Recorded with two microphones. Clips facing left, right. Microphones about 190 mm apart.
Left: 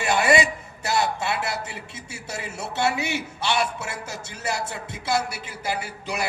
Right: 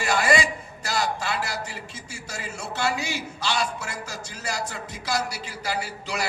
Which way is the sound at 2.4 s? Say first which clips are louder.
Left 3 dB; 65° left (ahead or behind).